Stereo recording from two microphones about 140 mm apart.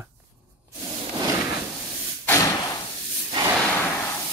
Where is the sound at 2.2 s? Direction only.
20° left (ahead or behind).